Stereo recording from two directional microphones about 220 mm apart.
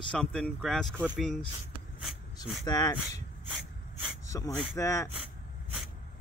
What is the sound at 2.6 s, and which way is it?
Speech, 15° left (ahead or behind).